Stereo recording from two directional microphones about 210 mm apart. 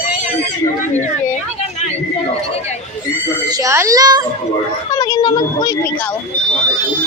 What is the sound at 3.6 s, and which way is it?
Speech, 15° right (ahead or behind).